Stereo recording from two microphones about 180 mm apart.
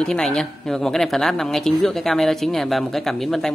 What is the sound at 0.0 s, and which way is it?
A woman's voice, 5° left (ahead or behind).